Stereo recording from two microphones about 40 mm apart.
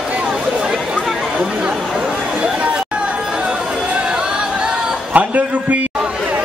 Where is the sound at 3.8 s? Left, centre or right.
Right.